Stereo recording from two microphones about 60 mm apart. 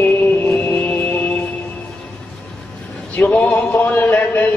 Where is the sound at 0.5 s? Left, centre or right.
Left.